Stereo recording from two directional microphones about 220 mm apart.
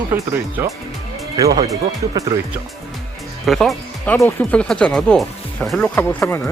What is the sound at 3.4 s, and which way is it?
Speech, centre (ahead or behind).